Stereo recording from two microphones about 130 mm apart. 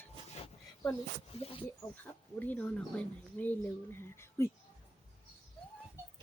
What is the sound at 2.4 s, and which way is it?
Speech, 10° left (ahead or behind).